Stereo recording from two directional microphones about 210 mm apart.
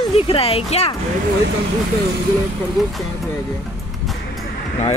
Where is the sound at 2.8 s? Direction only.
Centre (ahead or behind).